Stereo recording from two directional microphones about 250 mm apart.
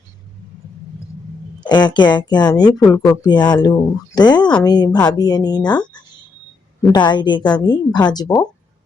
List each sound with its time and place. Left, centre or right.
1.6 s a woman's voice: centre
6.9 s a woman's voice: centre